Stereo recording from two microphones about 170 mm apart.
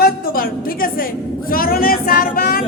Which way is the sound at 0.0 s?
60° left (ahead or behind).